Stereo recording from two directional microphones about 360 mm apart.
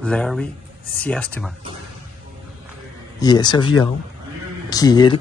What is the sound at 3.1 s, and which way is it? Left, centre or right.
Speech, centre.